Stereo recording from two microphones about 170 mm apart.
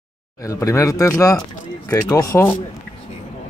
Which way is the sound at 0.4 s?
20° left (ahead or behind).